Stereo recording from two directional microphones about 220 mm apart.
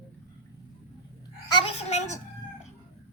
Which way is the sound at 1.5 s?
25° left (ahead or behind).